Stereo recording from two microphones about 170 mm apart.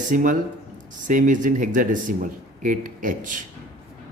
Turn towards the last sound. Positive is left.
turn(degrees=-50)  # may be behind; listen again after turning